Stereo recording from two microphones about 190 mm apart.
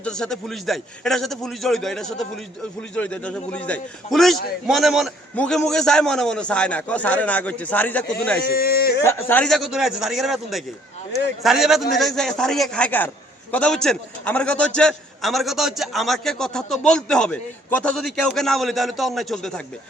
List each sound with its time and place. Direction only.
0.0 s a man's voice: 5° left (ahead or behind)
8.4 s speech: 50° left (ahead or behind)
9.0 s a man's voice: 10° left (ahead or behind)